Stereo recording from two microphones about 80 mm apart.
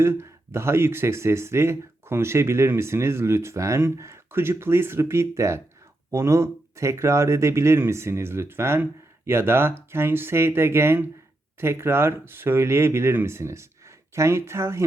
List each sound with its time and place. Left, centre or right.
0.0 s speech: right